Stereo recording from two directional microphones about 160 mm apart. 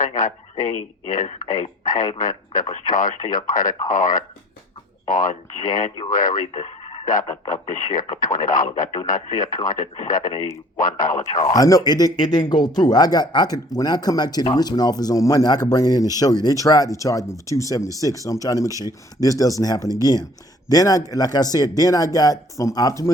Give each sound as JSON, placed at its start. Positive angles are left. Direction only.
{"t": 0.2, "sound": "speech", "side_deg": 55}
{"t": 1.8, "sound": "a man's voice", "side_deg": 25}
{"t": 2.1, "sound": "speech", "side_deg": 55}
{"t": 6.5, "sound": "radio", "side_deg": 40}
{"t": 7.0, "sound": "speech", "side_deg": 55}
{"t": 11.5, "sound": "a man's voice", "side_deg": 25}
{"t": 18.7, "sound": "speech", "side_deg": -20}
{"t": 19.2, "sound": "a man's voice", "side_deg": 20}